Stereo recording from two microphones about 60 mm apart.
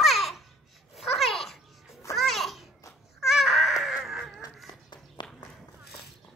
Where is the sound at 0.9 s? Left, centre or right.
Centre.